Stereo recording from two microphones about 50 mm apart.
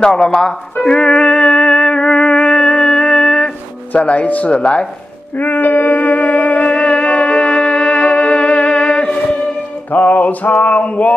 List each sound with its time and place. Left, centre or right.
0.0 s speech: centre
0.8 s music: centre
4.0 s speech: left
5.4 s music: left
9.8 s music: left